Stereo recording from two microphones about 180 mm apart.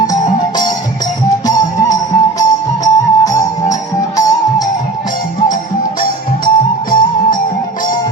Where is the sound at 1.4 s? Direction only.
20° left (ahead or behind).